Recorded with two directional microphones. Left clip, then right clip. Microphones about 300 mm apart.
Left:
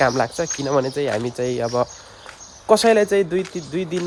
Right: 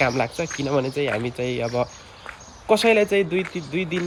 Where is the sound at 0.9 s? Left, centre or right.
Left.